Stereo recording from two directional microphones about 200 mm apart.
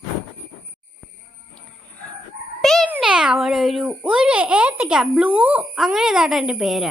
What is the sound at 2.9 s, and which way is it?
A child's voice, 5° right (ahead or behind).